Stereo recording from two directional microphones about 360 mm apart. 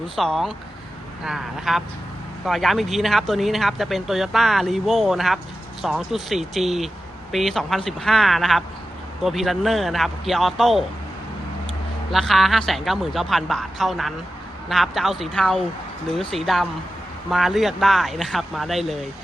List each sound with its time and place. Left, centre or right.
0.2 s speech: centre
12.1 s speech: centre